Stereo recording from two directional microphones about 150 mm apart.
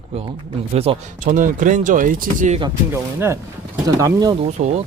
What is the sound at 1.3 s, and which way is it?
Speech, 60° right (ahead or behind).